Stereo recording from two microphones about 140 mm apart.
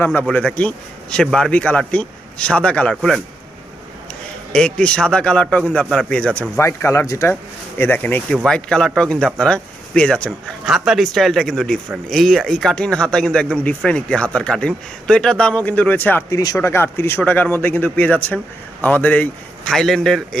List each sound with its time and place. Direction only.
0.0 s speech: 10° left (ahead or behind)
4.5 s speech: 5° left (ahead or behind)
6.6 s speech: 20° left (ahead or behind)
10.7 s speech: centre (ahead or behind)